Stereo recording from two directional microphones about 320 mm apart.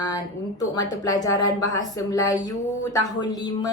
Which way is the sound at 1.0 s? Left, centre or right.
Centre.